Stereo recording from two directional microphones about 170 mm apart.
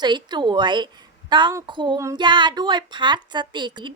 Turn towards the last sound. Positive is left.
turn(degrees=-25)  # may be behind; listen again after turning